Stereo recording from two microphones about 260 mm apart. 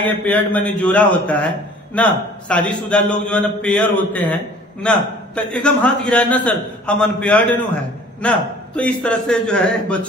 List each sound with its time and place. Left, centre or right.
0.0 s a man's voice: centre